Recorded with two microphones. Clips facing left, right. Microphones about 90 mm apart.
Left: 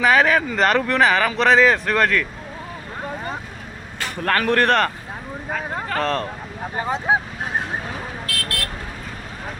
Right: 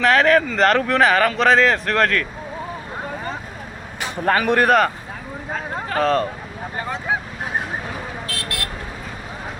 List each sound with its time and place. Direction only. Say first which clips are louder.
0.0 s speech: right 1 dB; 5° left (ahead or behind)
4.0 s speech: right 2 dB; 10° right (ahead or behind)
5.9 s speech: right 4 dB; 5° right (ahead or behind)
8.4 s vehicle: left 1 dB; 20° right (ahead or behind)